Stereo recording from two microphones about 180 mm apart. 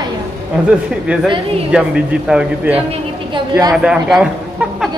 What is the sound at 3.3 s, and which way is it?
Speech, 20° right (ahead or behind).